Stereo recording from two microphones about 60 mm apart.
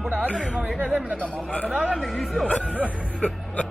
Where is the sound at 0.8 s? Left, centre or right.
Right.